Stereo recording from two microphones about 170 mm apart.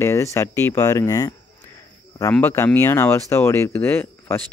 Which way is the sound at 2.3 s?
15° left (ahead or behind).